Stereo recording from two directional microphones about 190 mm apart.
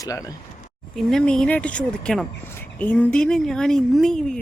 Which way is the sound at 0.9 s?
5° left (ahead or behind).